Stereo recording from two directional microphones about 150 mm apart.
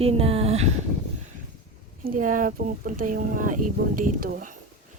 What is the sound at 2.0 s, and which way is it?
Speech, 65° right (ahead or behind).